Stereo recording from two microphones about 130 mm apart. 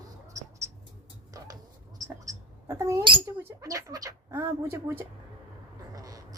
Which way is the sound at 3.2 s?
20° right (ahead or behind).